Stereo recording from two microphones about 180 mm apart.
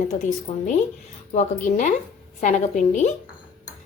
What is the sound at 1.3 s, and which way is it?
Speech, 45° left (ahead or behind).